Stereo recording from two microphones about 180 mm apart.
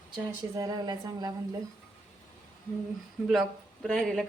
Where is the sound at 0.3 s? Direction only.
20° right (ahead or behind).